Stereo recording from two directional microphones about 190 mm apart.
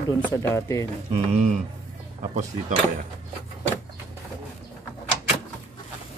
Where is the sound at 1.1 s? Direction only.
35° right (ahead or behind).